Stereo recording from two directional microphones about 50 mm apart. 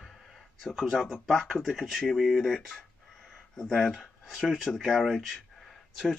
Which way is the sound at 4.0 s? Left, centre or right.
Centre.